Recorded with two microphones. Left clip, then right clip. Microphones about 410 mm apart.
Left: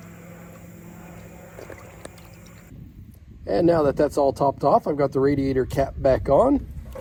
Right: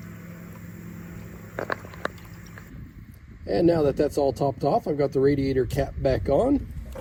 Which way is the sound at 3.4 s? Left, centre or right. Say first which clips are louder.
Left 2 dB; left.